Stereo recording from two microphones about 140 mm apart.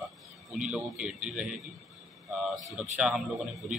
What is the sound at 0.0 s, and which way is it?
A man's voice, 5° right (ahead or behind).